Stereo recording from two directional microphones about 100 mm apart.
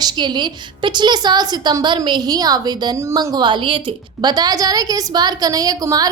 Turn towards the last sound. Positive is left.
turn(degrees=-40)  # may be behind; listen again after turning